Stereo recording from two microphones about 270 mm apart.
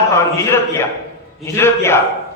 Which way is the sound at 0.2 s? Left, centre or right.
Centre.